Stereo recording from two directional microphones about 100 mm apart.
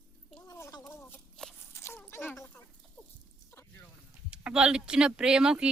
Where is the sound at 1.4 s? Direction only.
5° left (ahead or behind).